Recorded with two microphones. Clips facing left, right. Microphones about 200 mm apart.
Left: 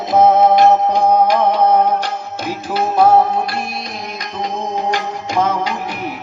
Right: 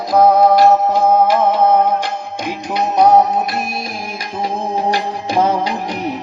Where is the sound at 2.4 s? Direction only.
15° right (ahead or behind).